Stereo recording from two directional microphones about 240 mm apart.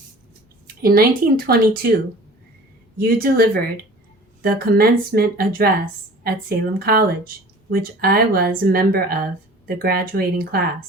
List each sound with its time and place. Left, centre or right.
0.8 s speech: right
3.0 s speech: right